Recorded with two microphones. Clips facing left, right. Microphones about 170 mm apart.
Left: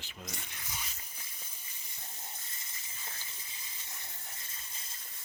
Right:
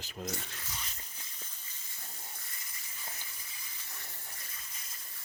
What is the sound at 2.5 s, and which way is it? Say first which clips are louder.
Steam: even; 25° left (ahead or behind).